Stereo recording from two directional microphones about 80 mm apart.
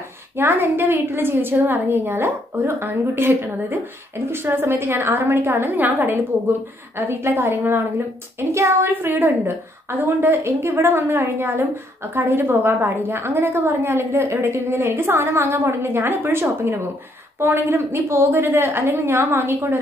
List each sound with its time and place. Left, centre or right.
0.4 s a woman's voice: right